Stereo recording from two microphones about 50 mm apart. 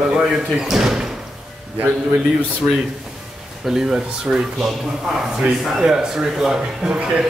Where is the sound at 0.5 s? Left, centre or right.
Centre.